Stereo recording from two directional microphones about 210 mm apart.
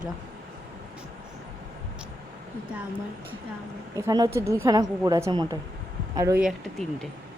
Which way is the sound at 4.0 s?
15° right (ahead or behind).